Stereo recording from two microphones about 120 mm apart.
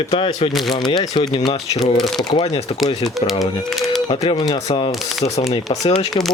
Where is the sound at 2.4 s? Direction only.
65° left (ahead or behind).